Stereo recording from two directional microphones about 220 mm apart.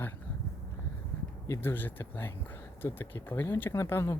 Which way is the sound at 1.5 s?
10° left (ahead or behind).